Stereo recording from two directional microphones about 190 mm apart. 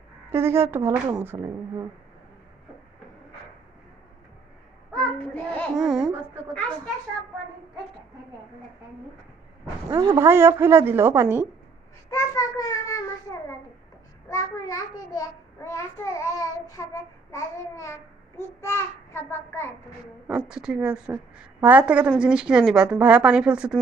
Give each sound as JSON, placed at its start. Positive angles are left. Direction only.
{"t": 0.3, "sound": "speech", "side_deg": -15}
{"t": 4.9, "sound": "a sound", "side_deg": 10}
{"t": 5.8, "sound": "a woman's voice", "side_deg": 0}
{"t": 9.9, "sound": "speech", "side_deg": -20}
{"t": 12.1, "sound": "a child's voice", "side_deg": 15}
{"t": 14.3, "sound": "a child's voice", "side_deg": 15}
{"t": 20.5, "sound": "a woman's voice", "side_deg": -5}